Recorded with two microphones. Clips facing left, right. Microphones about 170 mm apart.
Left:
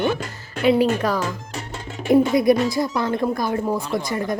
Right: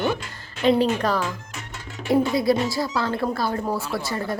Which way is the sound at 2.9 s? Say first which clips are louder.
Left 3 dB; 15° left (ahead or behind).